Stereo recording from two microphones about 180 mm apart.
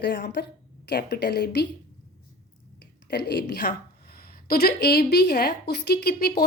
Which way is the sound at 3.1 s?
65° left (ahead or behind).